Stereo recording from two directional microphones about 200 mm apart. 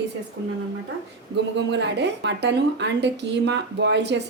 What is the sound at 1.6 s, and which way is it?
A woman's voice, 60° right (ahead or behind).